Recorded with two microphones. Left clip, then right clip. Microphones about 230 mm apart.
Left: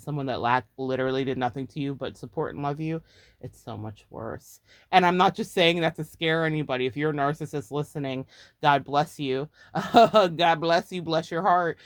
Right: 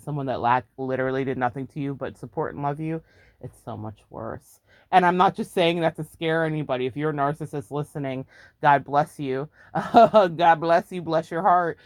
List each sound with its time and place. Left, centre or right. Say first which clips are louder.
0.0 s speech: right 3 dB; right